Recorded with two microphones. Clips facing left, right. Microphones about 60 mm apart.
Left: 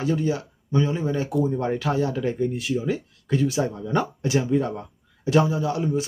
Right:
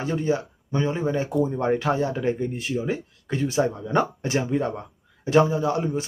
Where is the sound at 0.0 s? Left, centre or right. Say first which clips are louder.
Even; right.